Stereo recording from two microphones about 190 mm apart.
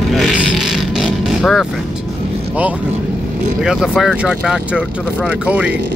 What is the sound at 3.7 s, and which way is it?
Speech, centre (ahead or behind).